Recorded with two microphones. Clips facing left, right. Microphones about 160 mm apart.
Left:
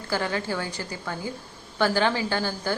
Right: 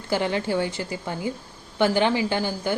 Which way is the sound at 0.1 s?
20° right (ahead or behind).